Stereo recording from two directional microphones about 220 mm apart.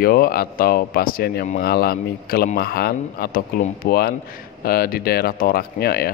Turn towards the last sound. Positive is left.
turn(degrees=45)  # may be behind; listen again after turning